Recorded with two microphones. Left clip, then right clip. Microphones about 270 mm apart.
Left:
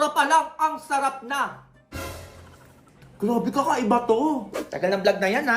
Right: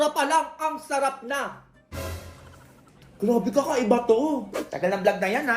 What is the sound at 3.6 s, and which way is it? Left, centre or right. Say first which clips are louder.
A woman's voice: left 3 dB; centre.